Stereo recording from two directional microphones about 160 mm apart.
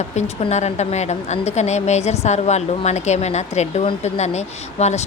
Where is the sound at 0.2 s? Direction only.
45° left (ahead or behind).